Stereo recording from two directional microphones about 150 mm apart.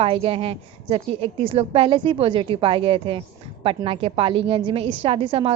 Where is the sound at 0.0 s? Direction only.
40° right (ahead or behind).